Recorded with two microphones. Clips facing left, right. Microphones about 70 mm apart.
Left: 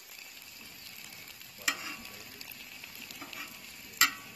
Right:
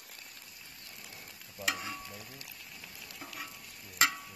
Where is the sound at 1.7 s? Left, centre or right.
Right.